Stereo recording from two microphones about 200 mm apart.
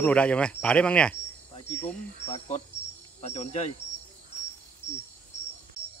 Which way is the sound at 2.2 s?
35° left (ahead or behind).